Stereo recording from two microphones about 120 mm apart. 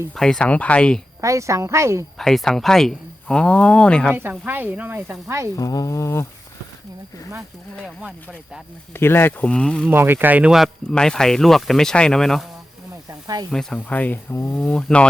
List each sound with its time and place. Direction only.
0.2 s speech: 5° left (ahead or behind)
1.2 s a woman's voice: 25° right (ahead or behind)
2.1 s speech: 5° left (ahead or behind)
4.1 s speech: 15° right (ahead or behind)
5.5 s speech: 30° left (ahead or behind)
8.9 s speech: 20° left (ahead or behind)
9.5 s speech: 5° left (ahead or behind)
9.9 s speech: 20° right (ahead or behind)
10.5 s speech: centre (ahead or behind)
13.1 s snake: 35° right (ahead or behind)
13.5 s speech: 5° left (ahead or behind)